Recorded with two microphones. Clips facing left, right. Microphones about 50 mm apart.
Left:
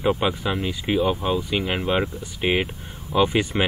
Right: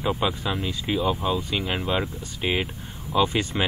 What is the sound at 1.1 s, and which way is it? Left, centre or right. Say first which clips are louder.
Speech: left 2 dB; left.